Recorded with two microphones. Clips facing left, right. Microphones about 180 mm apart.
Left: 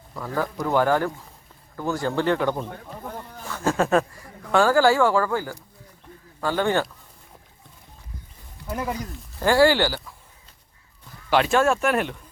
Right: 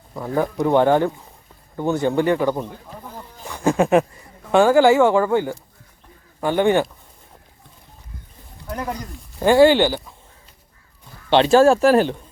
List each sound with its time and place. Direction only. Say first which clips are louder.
0.1 s speech: right 5 dB; 20° right (ahead or behind)
8.6 s speech: right 1 dB; 5° left (ahead or behind)
9.4 s speech: right 5 dB; 20° right (ahead or behind)
11.3 s speech: right 7 dB; 30° right (ahead or behind)